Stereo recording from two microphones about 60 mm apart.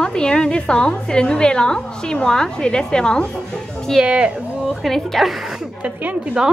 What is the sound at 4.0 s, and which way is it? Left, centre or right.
Speech, centre.